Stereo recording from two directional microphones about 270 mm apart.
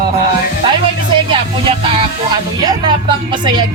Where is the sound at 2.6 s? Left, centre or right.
Centre.